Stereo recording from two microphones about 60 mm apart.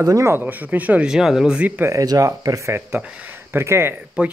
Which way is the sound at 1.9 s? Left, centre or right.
Right.